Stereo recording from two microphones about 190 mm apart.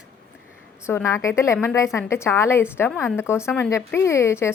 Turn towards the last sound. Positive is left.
turn(degrees=15)  # may be behind; listen again after turning